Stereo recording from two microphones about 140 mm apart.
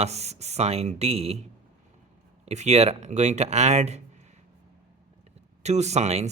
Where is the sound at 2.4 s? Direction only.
55° right (ahead or behind).